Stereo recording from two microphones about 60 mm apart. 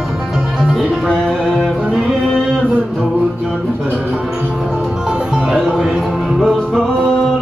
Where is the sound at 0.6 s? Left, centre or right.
Centre.